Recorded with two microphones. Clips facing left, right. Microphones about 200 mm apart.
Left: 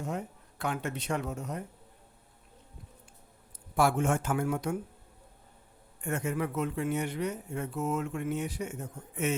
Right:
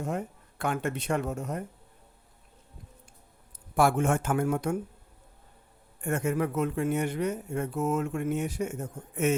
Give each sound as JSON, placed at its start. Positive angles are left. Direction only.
{"t": 0.6, "sound": "speech", "side_deg": -50}
{"t": 3.8, "sound": "speech", "side_deg": -55}
{"t": 6.0, "sound": "speech", "side_deg": -50}